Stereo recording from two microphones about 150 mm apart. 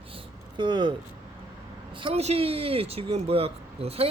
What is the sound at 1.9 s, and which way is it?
Speech, 40° right (ahead or behind).